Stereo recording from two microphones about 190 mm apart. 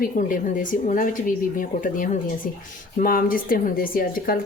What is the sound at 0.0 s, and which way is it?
A woman's voice, 45° left (ahead or behind).